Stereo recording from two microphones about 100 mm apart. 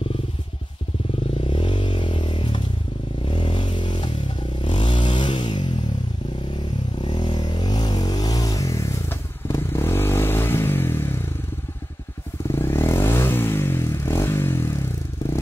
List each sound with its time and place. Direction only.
1.5 s a sound: 60° left (ahead or behind)
3.3 s vehicle: 55° left (ahead or behind)
7.0 s vehicle: 50° left (ahead or behind); by 11.1 s 25° left (ahead or behind)
12.4 s vehicle: 30° left (ahead or behind)